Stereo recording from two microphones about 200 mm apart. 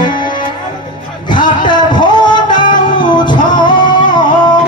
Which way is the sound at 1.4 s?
25° left (ahead or behind).